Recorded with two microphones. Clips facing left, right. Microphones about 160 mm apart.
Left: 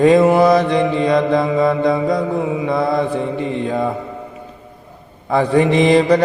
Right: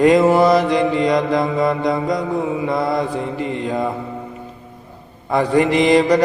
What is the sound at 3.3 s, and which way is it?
Music, 25° left (ahead or behind).